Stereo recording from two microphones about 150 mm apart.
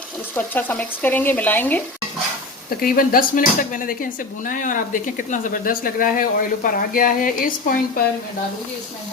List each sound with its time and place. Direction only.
0.3 s speech: 10° left (ahead or behind)
2.6 s speech: 70° left (ahead or behind)